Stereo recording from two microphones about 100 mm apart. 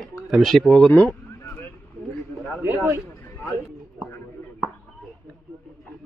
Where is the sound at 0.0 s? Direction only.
Centre (ahead or behind).